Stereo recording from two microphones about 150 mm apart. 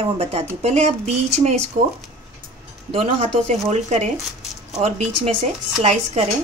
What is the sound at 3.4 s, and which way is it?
Speech, 50° right (ahead or behind).